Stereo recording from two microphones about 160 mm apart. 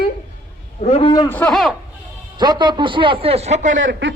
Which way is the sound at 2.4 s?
30° right (ahead or behind).